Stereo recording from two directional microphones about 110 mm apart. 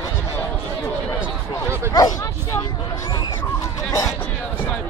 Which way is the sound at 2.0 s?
35° left (ahead or behind).